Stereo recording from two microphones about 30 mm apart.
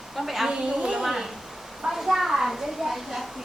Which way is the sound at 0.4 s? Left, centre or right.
Right.